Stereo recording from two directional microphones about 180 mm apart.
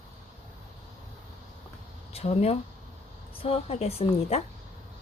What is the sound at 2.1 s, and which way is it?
A woman's voice, 35° left (ahead or behind).